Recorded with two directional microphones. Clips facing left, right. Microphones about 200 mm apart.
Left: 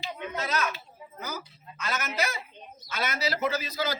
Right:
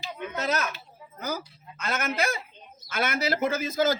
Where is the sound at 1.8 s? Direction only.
55° right (ahead or behind).